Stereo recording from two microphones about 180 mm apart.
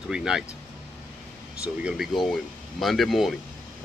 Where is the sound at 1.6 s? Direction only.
5° right (ahead or behind).